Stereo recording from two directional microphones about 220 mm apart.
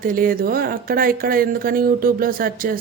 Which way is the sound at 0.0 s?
40° right (ahead or behind).